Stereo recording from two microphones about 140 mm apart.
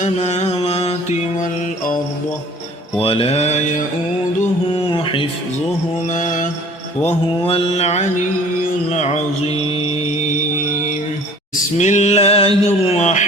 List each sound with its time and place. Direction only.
0.0 s music: 55° left (ahead or behind)
3.0 s mantra: 45° left (ahead or behind)
4.9 s a sound: 40° left (ahead or behind)
6.1 s mantra: 65° left (ahead or behind)
7.1 s mantra: 45° left (ahead or behind)
11.8 s a sound: 55° left (ahead or behind)